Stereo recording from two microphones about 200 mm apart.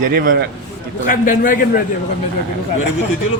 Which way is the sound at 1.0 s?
40° left (ahead or behind).